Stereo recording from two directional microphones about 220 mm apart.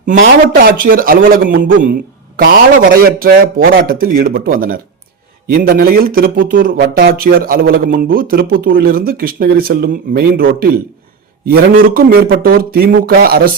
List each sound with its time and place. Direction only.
0.0 s a man's voice: 35° right (ahead or behind)
11.8 s speech: 40° right (ahead or behind)